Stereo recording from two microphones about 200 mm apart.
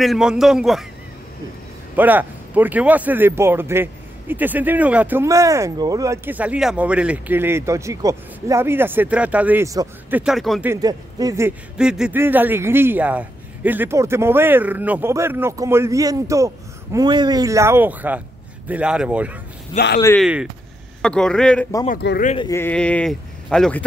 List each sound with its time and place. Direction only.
0.0 s speech: centre (ahead or behind)
2.0 s speech: 10° right (ahead or behind)
10.7 s speech: 20° right (ahead or behind)
11.8 s speech: 5° right (ahead or behind)
19.7 s speech: 25° left (ahead or behind)
20.2 s speech: 5° right (ahead or behind)
21.8 s speech: 50° left (ahead or behind)
22.4 s speech: 15° left (ahead or behind)